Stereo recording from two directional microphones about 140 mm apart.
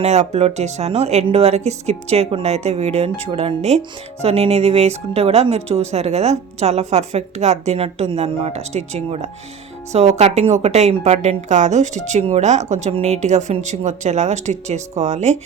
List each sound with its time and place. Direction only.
0.0 s speech: 50° right (ahead or behind)